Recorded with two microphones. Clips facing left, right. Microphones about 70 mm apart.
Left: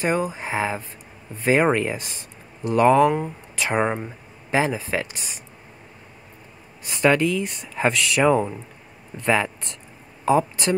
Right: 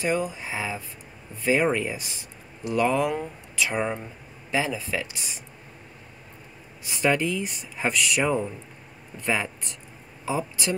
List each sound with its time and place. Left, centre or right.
0.0 s speech: left
2.6 s speech: left
4.5 s speech: left
6.8 s speech: left
10.2 s speech: left